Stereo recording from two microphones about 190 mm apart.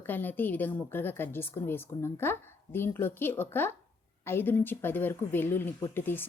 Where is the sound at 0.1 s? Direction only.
10° left (ahead or behind).